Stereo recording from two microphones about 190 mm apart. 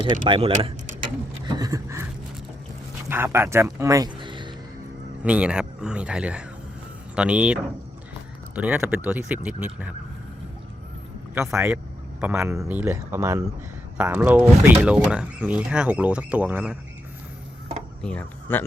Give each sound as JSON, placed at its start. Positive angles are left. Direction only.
{"t": 0.0, "sound": "speech", "side_deg": -25}
{"t": 1.3, "sound": "a sound", "side_deg": -20}
{"t": 3.1, "sound": "speech", "side_deg": -10}
{"t": 5.2, "sound": "speech", "side_deg": -5}
{"t": 11.3, "sound": "speech", "side_deg": -10}
{"t": 18.0, "sound": "speech", "side_deg": 5}